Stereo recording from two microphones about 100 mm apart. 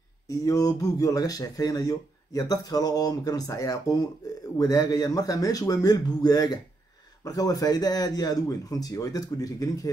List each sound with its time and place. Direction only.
0.3 s speech: 35° left (ahead or behind)